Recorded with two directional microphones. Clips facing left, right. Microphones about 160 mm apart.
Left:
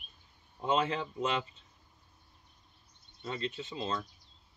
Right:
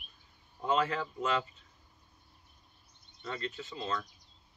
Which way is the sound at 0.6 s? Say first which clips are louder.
Even; 20° left (ahead or behind).